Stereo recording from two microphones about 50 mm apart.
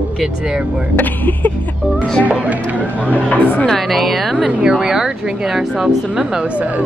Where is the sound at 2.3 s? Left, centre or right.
Right.